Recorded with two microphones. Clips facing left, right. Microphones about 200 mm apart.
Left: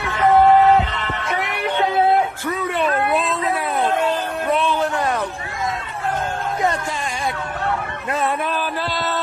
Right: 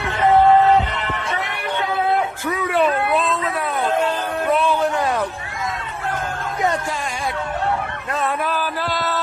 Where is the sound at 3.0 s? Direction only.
5° left (ahead or behind).